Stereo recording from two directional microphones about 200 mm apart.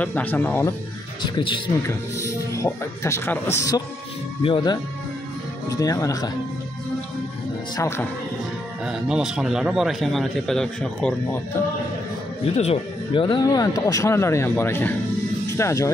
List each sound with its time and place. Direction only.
0.0 s speech: 10° left (ahead or behind)
1.2 s speech: 25° left (ahead or behind)
7.7 s speech: 15° left (ahead or behind)
8.8 s a man's voice: 5° right (ahead or behind)
12.5 s speech: 30° left (ahead or behind)